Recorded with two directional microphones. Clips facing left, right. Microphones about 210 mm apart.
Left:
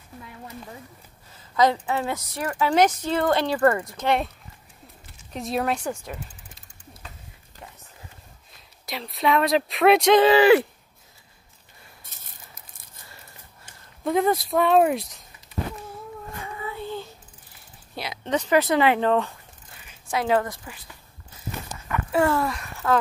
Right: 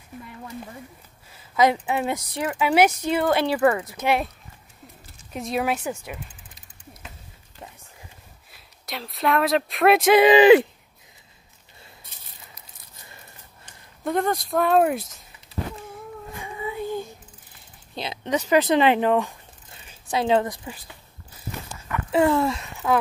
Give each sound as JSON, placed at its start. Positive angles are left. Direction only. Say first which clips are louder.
{"t": 1.3, "sound": "a woman's voice", "louder": "right 1 dB", "side_deg": -10}
{"t": 5.3, "sound": "speech", "louder": "right 1 dB", "side_deg": 0}
{"t": 8.5, "sound": "speech", "louder": "left 1 dB", "side_deg": 0}
{"t": 10.2, "sound": "speech", "louder": "right 3 dB", "side_deg": -20}
{"t": 12.0, "sound": "a sound", "louder": "right 1 dB", "side_deg": 45}
{"t": 14.0, "sound": "speech", "louder": "left 2 dB", "side_deg": 0}
{"t": 16.4, "sound": "a sound", "louder": "right 4 dB", "side_deg": -15}
{"t": 18.5, "sound": "speech", "louder": "right 2 dB", "side_deg": -20}
{"t": 19.7, "sound": "a sound", "louder": "right 1 dB", "side_deg": -25}
{"t": 22.1, "sound": "speech", "louder": "right 3 dB", "side_deg": -20}